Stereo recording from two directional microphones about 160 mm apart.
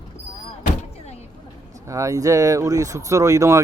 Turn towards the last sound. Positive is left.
turn(degrees=-20)  # may be behind; listen again after turning